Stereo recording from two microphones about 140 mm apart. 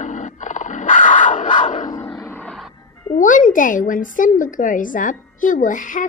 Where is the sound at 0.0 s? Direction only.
60° left (ahead or behind).